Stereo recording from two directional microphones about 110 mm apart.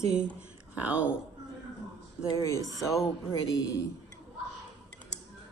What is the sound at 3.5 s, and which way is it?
Speech, 30° left (ahead or behind).